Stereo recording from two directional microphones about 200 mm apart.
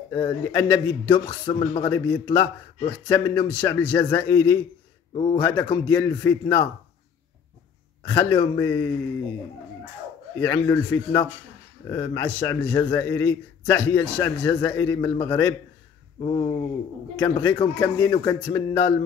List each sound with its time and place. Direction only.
0.1 s a man's voice: 15° left (ahead or behind)
1.4 s speech: 30° left (ahead or behind)
1.9 s a man's voice: 15° left (ahead or behind)
5.1 s speech: 25° left (ahead or behind)
5.4 s a man's voice: 10° left (ahead or behind)
8.1 s a man's voice: 10° left (ahead or behind)
10.3 s a man's voice: 15° left (ahead or behind)
16.2 s speech: 25° left (ahead or behind)
17.2 s a man's voice: 10° left (ahead or behind)